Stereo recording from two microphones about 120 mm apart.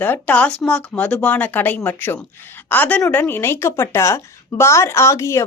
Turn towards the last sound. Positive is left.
turn(degrees=25)  # may be behind; listen again after turning